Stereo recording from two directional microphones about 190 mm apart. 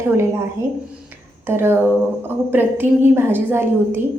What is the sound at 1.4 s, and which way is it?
A woman's voice, 10° right (ahead or behind).